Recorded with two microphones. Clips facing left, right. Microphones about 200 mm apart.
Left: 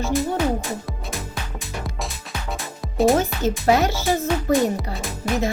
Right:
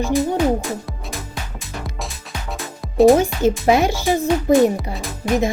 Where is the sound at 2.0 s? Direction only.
Centre (ahead or behind).